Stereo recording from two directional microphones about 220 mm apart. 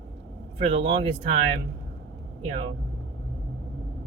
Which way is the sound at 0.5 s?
25° right (ahead or behind).